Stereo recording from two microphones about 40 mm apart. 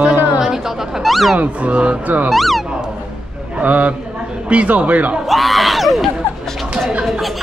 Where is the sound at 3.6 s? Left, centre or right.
Right.